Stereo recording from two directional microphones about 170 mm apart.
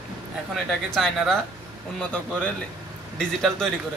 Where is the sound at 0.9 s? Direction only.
Centre (ahead or behind).